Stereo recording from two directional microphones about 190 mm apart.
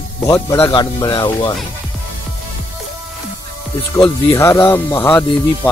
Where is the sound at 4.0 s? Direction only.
15° left (ahead or behind).